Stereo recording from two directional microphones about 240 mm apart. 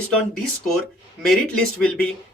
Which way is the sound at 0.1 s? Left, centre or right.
Centre.